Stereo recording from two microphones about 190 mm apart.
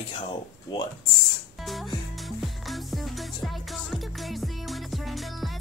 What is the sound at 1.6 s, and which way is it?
Music, centre (ahead or behind).